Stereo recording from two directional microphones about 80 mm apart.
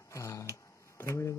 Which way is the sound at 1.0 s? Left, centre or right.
Left.